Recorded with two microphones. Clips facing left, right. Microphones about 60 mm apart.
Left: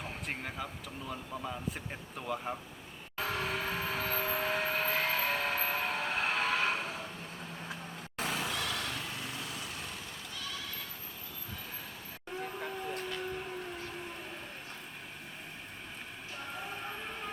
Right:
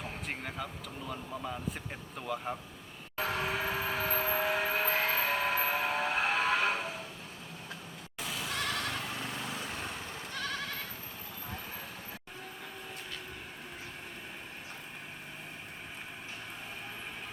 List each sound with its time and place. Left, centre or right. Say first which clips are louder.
0.3 s speech: even; centre
3.2 s vehicle: right 2 dB; centre
8.2 s vehicle: left 4 dB; left
8.4 s vehicle: right 1 dB; right
10.3 s goat: right 6 dB; right